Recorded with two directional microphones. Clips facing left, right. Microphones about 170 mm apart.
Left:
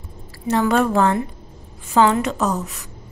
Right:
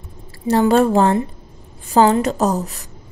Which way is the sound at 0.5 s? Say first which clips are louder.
Right 4 dB; 30° right (ahead or behind).